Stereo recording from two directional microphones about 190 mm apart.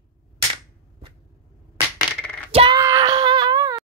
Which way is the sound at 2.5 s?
30° right (ahead or behind).